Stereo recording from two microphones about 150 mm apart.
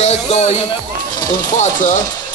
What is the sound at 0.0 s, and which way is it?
Speech, 50° left (ahead or behind).